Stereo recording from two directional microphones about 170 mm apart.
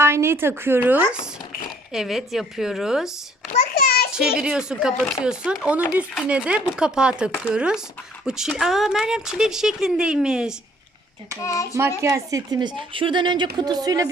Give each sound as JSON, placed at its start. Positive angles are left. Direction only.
{"t": 0.0, "sound": "a woman's voice", "side_deg": -15}
{"t": 3.8, "sound": "a sound", "side_deg": 65}
{"t": 4.4, "sound": "speech", "side_deg": -5}
{"t": 11.4, "sound": "a child's voice", "side_deg": 20}
{"t": 11.9, "sound": "a woman's voice", "side_deg": -20}